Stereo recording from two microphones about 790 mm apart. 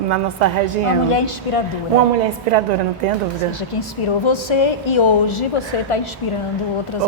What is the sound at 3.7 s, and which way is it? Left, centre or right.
A woman's voice, left.